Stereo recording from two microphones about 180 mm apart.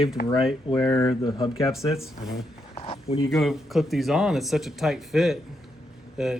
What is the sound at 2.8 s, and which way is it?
Speech, 30° left (ahead or behind).